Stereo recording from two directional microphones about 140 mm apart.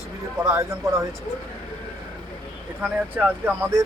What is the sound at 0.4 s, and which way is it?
Speech, 20° right (ahead or behind).